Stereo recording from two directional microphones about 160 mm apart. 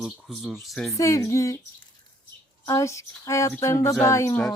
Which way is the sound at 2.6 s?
20° left (ahead or behind).